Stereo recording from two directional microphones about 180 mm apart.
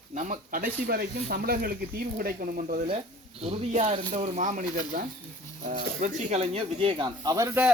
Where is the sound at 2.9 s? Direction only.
35° right (ahead or behind).